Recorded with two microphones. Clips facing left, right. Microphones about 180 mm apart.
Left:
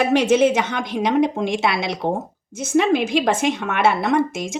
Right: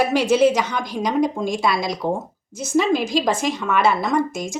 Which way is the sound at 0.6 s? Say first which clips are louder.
Left 2 dB; 60° left (ahead or behind).